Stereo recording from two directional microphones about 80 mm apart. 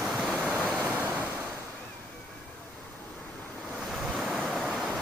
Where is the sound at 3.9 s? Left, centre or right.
Centre.